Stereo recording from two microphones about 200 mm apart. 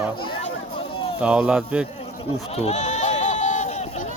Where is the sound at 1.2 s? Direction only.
5° right (ahead or behind).